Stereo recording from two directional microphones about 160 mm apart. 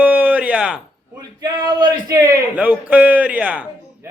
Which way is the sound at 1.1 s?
25° right (ahead or behind).